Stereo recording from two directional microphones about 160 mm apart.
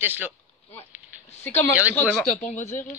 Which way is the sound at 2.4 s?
50° left (ahead or behind).